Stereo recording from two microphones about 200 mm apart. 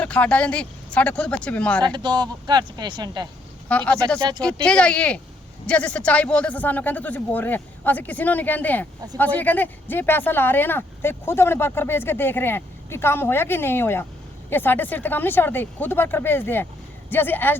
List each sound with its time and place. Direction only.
0.0 s speech: 5° left (ahead or behind)
1.8 s speech: 20° right (ahead or behind)
3.7 s speech: 5° left (ahead or behind)
4.2 s speech: 20° right (ahead or behind)
4.6 s speech: 5° left (ahead or behind)